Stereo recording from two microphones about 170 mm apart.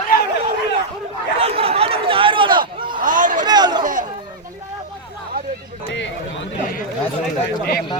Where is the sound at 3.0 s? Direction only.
50° right (ahead or behind).